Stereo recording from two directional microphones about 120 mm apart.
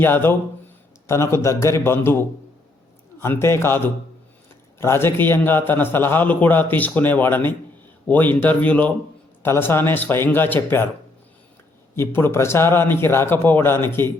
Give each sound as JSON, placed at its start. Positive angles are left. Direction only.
{"t": 0.0, "sound": "a man's voice", "side_deg": 20}
{"t": 11.9, "sound": "a man's voice", "side_deg": 20}